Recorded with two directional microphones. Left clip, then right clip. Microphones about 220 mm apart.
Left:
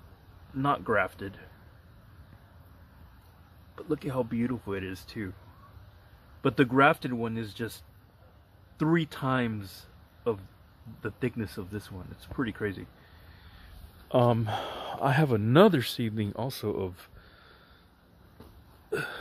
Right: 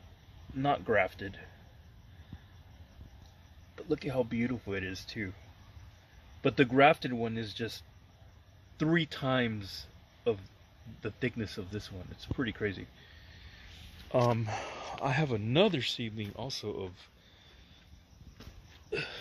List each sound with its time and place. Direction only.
0.6 s speech: 5° left (ahead or behind)
3.7 s speech: 5° left (ahead or behind)
6.4 s speech: 5° left (ahead or behind)
11.0 s speech: 5° left (ahead or behind)
14.1 s speech: 20° left (ahead or behind)
18.9 s hiccup: 15° left (ahead or behind)